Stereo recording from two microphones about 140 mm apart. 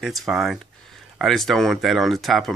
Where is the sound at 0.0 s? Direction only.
Centre (ahead or behind).